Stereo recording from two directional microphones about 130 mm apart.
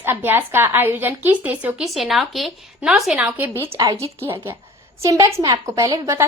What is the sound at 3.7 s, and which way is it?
Speech, 40° right (ahead or behind).